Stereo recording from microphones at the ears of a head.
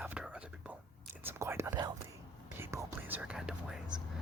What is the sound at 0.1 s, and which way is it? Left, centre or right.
Whispering, centre.